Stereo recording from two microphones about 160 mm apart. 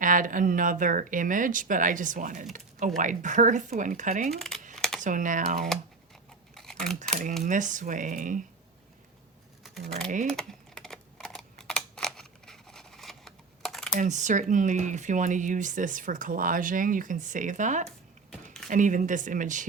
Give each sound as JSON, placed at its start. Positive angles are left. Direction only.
{"t": 0.0, "sound": "speech", "side_deg": -55}
{"t": 4.3, "sound": "speech", "side_deg": 0}
{"t": 4.7, "sound": "computer keyboard", "side_deg": 5}
{"t": 4.9, "sound": "speech", "side_deg": -55}
{"t": 6.5, "sound": "typing", "side_deg": 5}
{"t": 7.1, "sound": "speech", "side_deg": -45}
{"t": 10.2, "sound": "typing", "side_deg": 5}
{"t": 14.0, "sound": "speech", "side_deg": -50}